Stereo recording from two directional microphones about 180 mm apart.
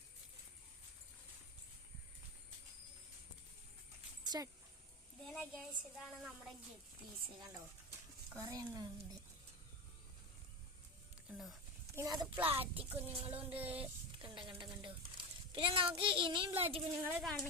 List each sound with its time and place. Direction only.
4.2 s dog: 20° right (ahead or behind)
5.3 s a woman's voice: 5° left (ahead or behind)
8.3 s speech: 15° right (ahead or behind)
11.3 s clip-clop: centre (ahead or behind)
11.9 s speech: 20° right (ahead or behind)
12.9 s child singing: 35° right (ahead or behind)
13.3 s a sound: 10° right (ahead or behind)
13.7 s a sound: 30° right (ahead or behind)
14.6 s a child's voice: 25° right (ahead or behind)
16.6 s child singing: 30° right (ahead or behind)
17.0 s a sound: 10° right (ahead or behind)